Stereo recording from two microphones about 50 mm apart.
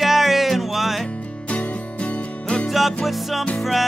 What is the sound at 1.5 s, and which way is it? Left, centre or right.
Music, left.